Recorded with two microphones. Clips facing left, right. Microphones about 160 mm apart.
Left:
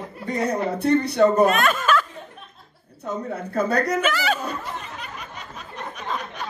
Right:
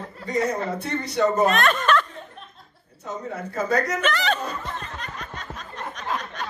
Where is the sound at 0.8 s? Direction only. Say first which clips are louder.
Left 9 dB; 60° left (ahead or behind).